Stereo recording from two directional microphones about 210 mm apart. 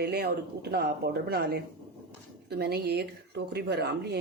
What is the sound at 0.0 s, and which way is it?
Speech, 50° right (ahead or behind).